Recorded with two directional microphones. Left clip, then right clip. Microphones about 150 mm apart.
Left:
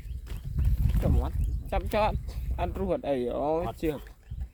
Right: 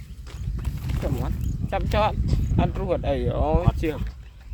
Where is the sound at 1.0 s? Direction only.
20° left (ahead or behind).